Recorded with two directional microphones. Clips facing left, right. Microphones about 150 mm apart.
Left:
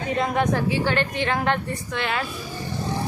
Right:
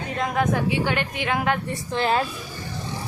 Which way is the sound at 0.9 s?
10° right (ahead or behind).